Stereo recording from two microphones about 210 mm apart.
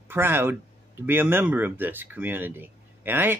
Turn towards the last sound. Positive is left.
turn(degrees=-10)  # may be behind; listen again after turning